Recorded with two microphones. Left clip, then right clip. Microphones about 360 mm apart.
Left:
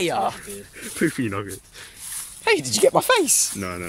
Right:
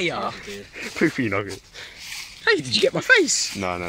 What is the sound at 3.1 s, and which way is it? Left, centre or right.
Speech, centre.